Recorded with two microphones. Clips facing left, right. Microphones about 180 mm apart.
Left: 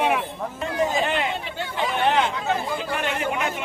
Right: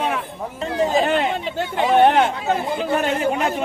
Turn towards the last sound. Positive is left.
turn(degrees=-35)  # may be behind; listen again after turning